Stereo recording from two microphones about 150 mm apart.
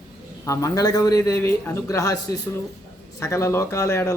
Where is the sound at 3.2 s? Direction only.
20° left (ahead or behind).